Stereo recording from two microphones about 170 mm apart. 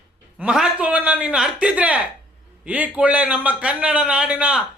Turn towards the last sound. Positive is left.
turn(degrees=-5)  # may be behind; listen again after turning